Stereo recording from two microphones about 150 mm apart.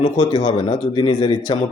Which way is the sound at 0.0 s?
30° left (ahead or behind).